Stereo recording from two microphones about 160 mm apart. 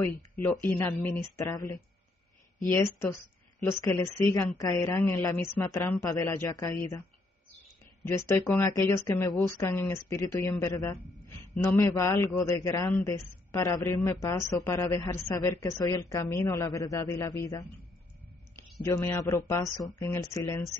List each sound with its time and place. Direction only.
0.4 s a man's voice: 15° left (ahead or behind)
8.5 s a man's voice: 15° left (ahead or behind)
18.9 s a man's voice: 15° left (ahead or behind)